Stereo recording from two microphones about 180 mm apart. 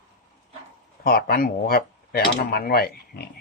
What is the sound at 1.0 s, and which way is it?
Speech, 55° left (ahead or behind).